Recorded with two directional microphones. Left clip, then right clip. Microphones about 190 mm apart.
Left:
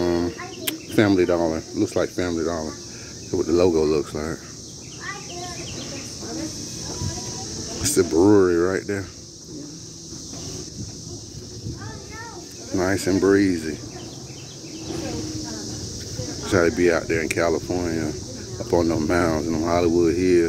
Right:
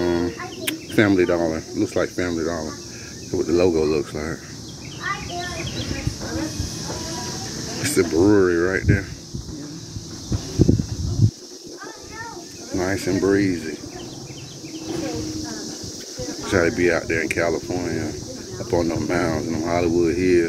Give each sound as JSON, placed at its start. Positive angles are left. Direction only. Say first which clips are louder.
{"t": 0.0, "sound": "speech", "louder": "right 1 dB", "side_deg": 20}
{"t": 7.8, "sound": "speech", "louder": "even", "side_deg": 20}
{"t": 12.7, "sound": "speech", "louder": "left 1 dB", "side_deg": 35}
{"t": 16.4, "sound": "speech", "louder": "even", "side_deg": 30}